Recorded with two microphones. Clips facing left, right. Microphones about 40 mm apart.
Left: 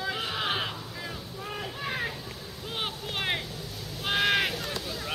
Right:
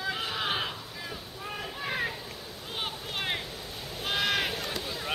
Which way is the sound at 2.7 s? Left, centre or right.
Centre.